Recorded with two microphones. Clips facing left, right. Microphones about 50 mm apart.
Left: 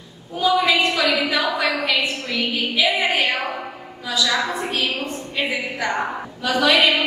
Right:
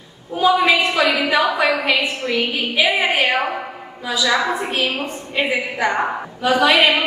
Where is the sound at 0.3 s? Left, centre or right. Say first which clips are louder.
Right 3 dB; right.